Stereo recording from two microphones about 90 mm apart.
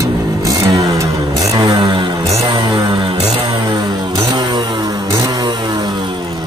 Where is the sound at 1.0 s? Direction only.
40° right (ahead or behind).